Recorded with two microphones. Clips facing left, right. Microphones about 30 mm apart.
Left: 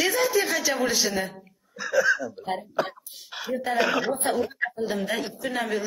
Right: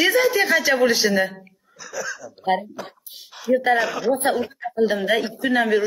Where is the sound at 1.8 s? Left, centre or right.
Left.